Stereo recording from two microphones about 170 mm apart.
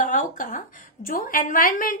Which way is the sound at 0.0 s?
50° left (ahead or behind).